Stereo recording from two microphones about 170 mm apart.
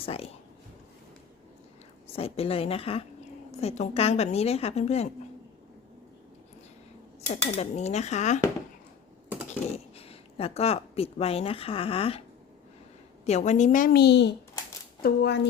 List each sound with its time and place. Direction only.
0.0 s a woman's voice: 35° left (ahead or behind)
2.1 s a woman's voice: 35° left (ahead or behind)
7.5 s a woman's voice: 40° left (ahead or behind)
9.5 s speech: 35° left (ahead or behind)
13.2 s a woman's voice: 40° left (ahead or behind); by 14.3 s 85° left
15.0 s speech: 75° left (ahead or behind)